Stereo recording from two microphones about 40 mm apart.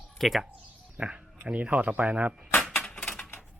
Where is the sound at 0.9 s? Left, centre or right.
Right.